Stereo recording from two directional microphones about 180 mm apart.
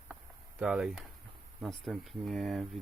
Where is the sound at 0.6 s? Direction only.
5° right (ahead or behind).